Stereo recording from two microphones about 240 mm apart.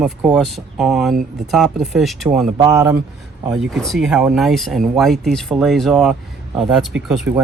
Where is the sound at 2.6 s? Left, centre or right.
Centre.